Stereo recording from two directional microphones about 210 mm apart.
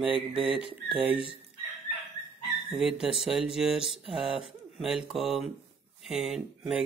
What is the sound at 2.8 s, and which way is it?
Speech, 5° right (ahead or behind).